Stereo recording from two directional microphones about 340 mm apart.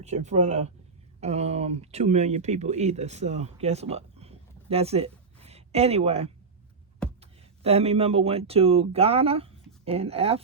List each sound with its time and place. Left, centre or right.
0.0 s speech: centre